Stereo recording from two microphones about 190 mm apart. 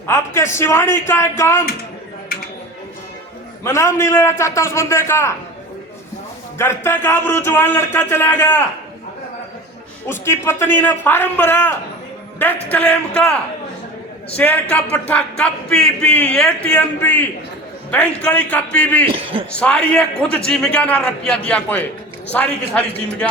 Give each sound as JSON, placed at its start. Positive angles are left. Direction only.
{"t": 0.1, "sound": "speech", "side_deg": 15}
{"t": 3.6, "sound": "speech", "side_deg": 15}
{"t": 6.6, "sound": "speech", "side_deg": 15}
{"t": 10.1, "sound": "speech", "side_deg": 15}
{"t": 14.3, "sound": "speech", "side_deg": 10}
{"t": 19.1, "sound": "a man's voice", "side_deg": -30}
{"t": 19.5, "sound": "a man's voice", "side_deg": 5}